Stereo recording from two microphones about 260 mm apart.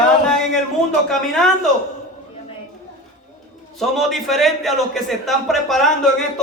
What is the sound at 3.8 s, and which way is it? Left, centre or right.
A man's voice, centre.